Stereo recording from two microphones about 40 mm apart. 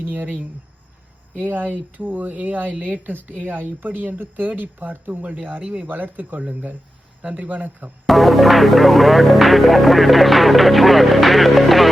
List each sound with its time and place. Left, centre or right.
0.0 s speech: right
1.4 s speech: right
5.2 s speech: right
8.0 s speech: centre